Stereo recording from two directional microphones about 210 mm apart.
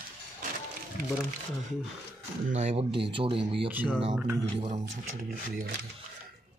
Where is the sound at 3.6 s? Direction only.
5° right (ahead or behind).